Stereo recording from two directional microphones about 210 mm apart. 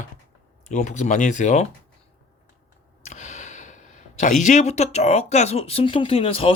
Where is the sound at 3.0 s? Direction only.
35° left (ahead or behind).